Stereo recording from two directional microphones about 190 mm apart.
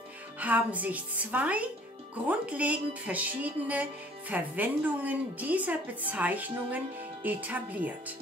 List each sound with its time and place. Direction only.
0.4 s a woman's voice: 10° right (ahead or behind)